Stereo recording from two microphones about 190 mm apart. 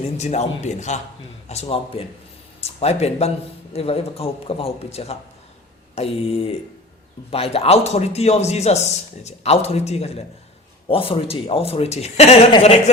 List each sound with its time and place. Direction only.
0.2 s a man's voice: 35° left (ahead or behind)